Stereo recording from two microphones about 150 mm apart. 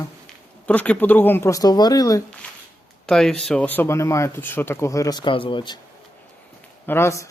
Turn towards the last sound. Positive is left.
turn(degrees=20)  # may be behind; listen again after turning